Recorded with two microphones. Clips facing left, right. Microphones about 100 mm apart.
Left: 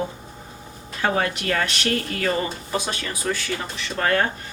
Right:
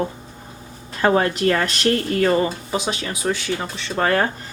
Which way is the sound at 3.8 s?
30° right (ahead or behind).